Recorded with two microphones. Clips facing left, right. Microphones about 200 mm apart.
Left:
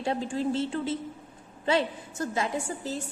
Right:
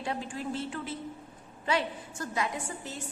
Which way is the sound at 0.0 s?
30° left (ahead or behind).